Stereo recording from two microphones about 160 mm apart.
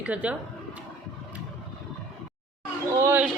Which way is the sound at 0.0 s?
10° right (ahead or behind).